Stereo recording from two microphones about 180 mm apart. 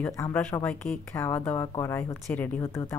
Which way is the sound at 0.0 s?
10° left (ahead or behind).